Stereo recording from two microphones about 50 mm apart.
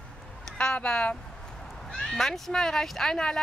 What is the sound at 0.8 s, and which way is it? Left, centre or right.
Speech, centre.